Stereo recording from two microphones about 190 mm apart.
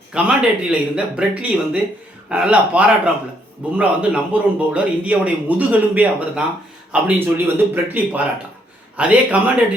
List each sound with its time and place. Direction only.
0.1 s speech: 5° right (ahead or behind)